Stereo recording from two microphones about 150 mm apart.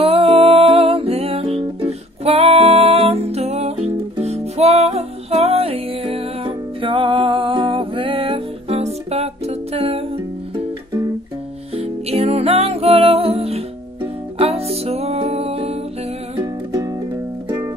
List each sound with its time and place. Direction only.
0.0 s music: 40° right (ahead or behind)
11.7 s music: 40° right (ahead or behind)
16.3 s music: 20° right (ahead or behind)